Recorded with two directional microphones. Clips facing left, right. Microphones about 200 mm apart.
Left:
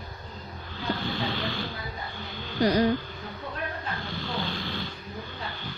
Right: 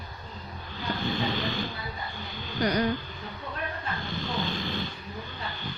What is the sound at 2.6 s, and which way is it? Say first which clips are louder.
Speech: left 4 dB; 25° left (ahead or behind).